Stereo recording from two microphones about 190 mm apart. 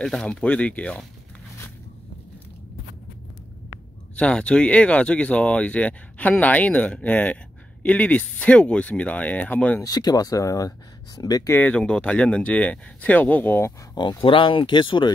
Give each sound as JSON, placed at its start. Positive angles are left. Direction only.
{"t": 0.0, "sound": "speech", "side_deg": 5}
{"t": 4.2, "sound": "speech", "side_deg": 5}
{"t": 9.8, "sound": "speech", "side_deg": 20}
{"t": 13.9, "sound": "speech", "side_deg": 25}